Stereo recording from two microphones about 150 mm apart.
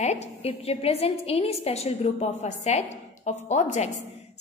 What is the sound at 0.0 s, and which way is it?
A woman's voice, 50° left (ahead or behind).